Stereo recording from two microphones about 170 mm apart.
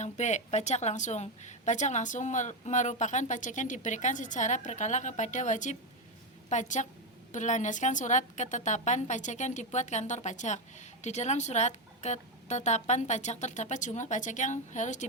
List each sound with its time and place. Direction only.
0.0 s a woman's voice: 45° left (ahead or behind)